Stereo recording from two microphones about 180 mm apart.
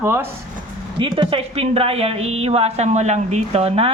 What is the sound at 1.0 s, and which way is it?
A woman's voice, 30° right (ahead or behind).